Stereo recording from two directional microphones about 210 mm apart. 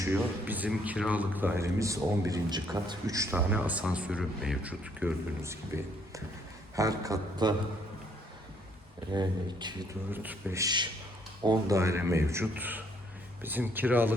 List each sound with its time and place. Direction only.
0.0 s a man's voice: 10° right (ahead or behind)
9.1 s a man's voice: 20° right (ahead or behind)